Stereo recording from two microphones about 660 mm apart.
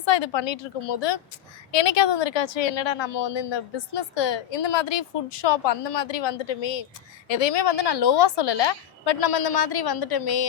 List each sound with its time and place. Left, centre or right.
0.0 s a woman's voice: left